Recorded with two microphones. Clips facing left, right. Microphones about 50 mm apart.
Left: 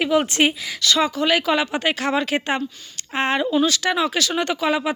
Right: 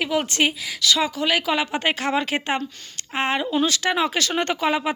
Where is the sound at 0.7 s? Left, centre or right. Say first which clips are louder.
Left 2 dB; centre.